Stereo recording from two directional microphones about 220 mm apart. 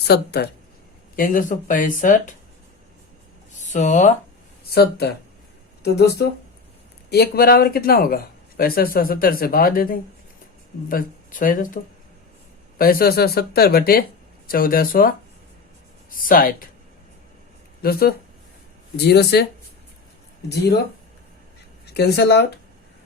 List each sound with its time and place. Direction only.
0.1 s speech: 45° left (ahead or behind)
3.6 s speech: 35° left (ahead or behind)
4.7 s speech: 45° left (ahead or behind)
12.8 s speech: 40° left (ahead or behind)
17.8 s speech: 40° left (ahead or behind)
21.9 s speech: 50° left (ahead or behind)